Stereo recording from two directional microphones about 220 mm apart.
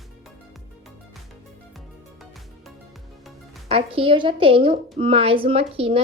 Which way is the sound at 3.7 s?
25° right (ahead or behind).